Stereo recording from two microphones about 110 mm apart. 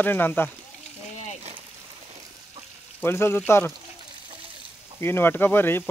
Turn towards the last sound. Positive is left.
turn(degrees=20)  # may be behind; listen again after turning